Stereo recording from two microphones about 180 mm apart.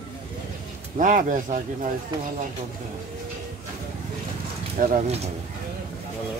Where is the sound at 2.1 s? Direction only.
25° right (ahead or behind).